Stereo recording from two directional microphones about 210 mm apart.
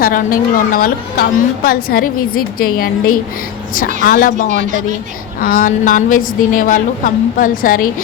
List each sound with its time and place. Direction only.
0.0 s a woman's voice: 40° left (ahead or behind)
4.4 s speech: 40° right (ahead or behind)
5.4 s a woman's voice: 40° left (ahead or behind)